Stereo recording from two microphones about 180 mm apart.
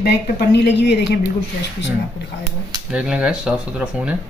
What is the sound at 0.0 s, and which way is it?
A woman's voice, 65° left (ahead or behind).